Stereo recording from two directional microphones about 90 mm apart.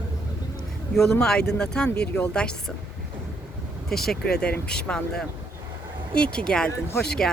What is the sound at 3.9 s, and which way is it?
Speech, 5° left (ahead or behind).